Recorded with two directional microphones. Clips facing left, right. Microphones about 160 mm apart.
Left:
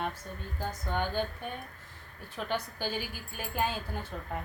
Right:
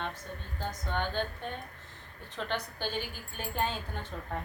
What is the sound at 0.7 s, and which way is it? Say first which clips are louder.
A woman's voice: left 1 dB; 10° left (ahead or behind).